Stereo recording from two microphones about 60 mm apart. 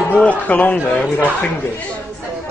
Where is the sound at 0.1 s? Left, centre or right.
Left.